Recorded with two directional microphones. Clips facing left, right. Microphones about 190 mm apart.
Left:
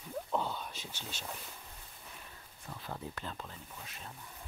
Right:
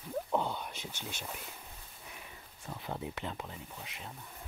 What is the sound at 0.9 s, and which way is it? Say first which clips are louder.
Speech: right 1 dB; 15° right (ahead or behind).